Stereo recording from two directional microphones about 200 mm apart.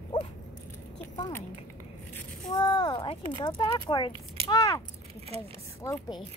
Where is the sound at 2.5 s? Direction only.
25° left (ahead or behind).